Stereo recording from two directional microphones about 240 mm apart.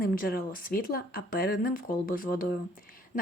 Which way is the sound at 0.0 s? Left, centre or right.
Left.